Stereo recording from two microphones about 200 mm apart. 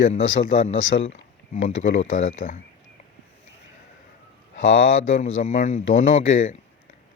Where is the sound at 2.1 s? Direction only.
40° left (ahead or behind).